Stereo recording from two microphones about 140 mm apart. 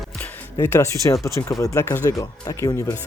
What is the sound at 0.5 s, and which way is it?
Speech, 20° left (ahead or behind).